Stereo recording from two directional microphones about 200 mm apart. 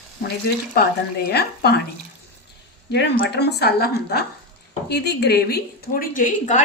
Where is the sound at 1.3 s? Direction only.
55° left (ahead or behind).